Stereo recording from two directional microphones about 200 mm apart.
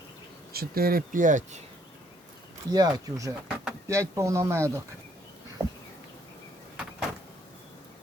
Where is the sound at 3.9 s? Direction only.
15° right (ahead or behind).